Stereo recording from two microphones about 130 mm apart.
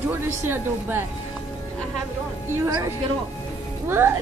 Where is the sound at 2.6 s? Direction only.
25° right (ahead or behind).